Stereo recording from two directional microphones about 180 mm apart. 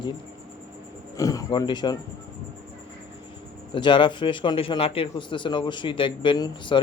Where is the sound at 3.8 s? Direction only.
25° left (ahead or behind).